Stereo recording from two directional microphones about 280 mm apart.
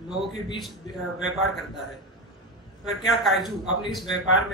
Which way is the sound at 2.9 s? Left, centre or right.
Centre.